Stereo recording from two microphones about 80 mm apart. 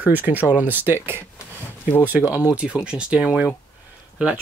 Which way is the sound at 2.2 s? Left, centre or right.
Left.